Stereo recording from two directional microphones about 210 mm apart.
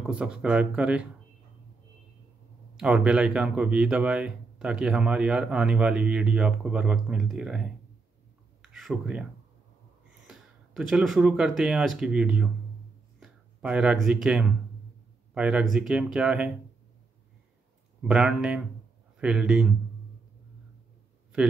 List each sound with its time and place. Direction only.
0.0 s speech: 5° right (ahead or behind)
2.7 s speech: 5° right (ahead or behind)
8.6 s a sound: centre (ahead or behind)
10.2 s speech: centre (ahead or behind)
18.0 s speech: 5° right (ahead or behind)